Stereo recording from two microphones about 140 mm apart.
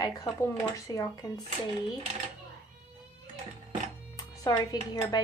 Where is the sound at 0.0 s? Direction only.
20° left (ahead or behind).